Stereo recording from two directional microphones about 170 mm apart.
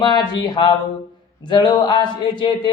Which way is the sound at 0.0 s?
25° left (ahead or behind).